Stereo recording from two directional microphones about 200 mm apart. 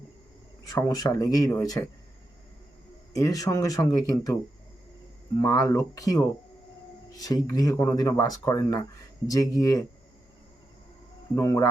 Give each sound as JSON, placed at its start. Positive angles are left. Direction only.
{"t": 0.7, "sound": "speech", "side_deg": 15}
{"t": 3.2, "sound": "speech", "side_deg": 15}
{"t": 5.4, "sound": "speech", "side_deg": 15}
{"t": 11.3, "sound": "speech", "side_deg": 15}